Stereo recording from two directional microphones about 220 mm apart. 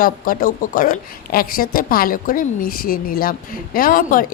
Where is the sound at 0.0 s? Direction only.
40° left (ahead or behind).